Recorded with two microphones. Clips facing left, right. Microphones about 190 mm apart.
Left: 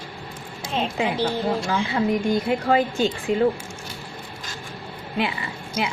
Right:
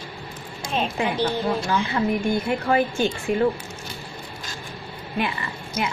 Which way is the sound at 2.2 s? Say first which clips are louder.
Left 1 dB; 15° left (ahead or behind).